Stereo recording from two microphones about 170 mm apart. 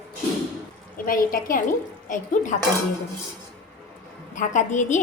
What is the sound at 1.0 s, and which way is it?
A woman's voice, 55° left (ahead or behind).